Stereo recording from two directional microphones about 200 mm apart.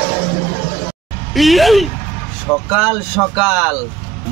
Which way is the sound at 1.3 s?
Centre (ahead or behind).